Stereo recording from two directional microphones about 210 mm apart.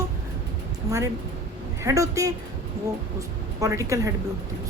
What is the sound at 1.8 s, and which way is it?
A woman's voice, 15° right (ahead or behind).